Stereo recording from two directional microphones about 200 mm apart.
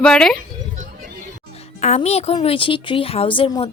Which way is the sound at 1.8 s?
35° left (ahead or behind).